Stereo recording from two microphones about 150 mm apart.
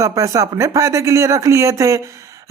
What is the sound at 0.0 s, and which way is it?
A man's voice, 20° right (ahead or behind).